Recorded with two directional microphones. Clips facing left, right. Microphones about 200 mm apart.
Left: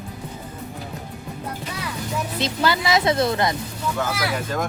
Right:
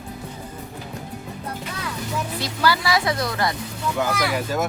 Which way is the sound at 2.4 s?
20° left (ahead or behind).